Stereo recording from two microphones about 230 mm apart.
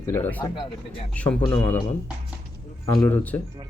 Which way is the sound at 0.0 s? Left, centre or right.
Centre.